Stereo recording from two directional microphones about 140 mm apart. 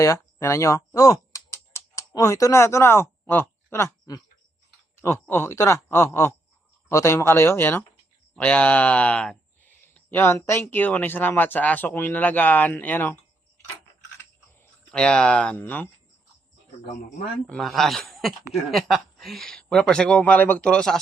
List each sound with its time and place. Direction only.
0.0 s speech: 20° left (ahead or behind)
5.3 s speech: 15° left (ahead or behind)
14.8 s speech: 5° left (ahead or behind)
17.4 s speech: 5° left (ahead or behind)